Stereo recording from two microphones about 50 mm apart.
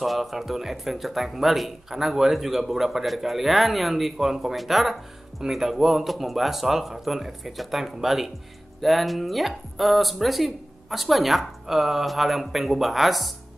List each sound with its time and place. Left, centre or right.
0.0 s speech: centre